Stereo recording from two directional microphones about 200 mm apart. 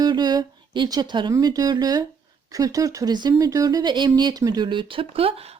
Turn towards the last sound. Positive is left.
turn(degrees=-30)  # may be behind; listen again after turning